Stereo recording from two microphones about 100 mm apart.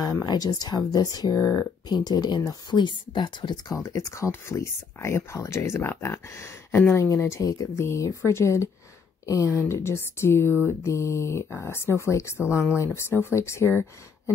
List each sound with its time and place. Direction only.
0.0 s speech: 40° left (ahead or behind)
3.7 s speech: 30° left (ahead or behind)